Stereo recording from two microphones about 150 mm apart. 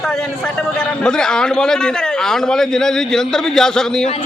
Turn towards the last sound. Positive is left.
turn(degrees=5)  # may be behind; listen again after turning